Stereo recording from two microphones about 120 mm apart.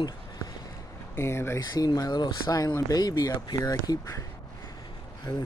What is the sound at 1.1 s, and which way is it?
Speech, 20° left (ahead or behind).